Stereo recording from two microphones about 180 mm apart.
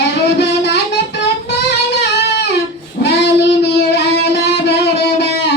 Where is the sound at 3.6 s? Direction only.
65° left (ahead or behind).